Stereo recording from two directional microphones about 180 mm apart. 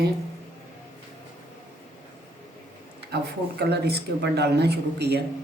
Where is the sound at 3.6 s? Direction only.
65° right (ahead or behind).